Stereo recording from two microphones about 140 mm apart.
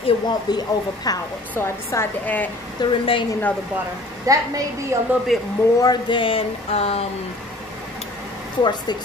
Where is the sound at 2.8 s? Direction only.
35° left (ahead or behind).